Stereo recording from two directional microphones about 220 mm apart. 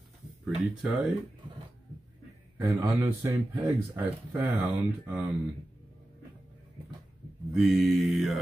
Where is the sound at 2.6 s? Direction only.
15° right (ahead or behind).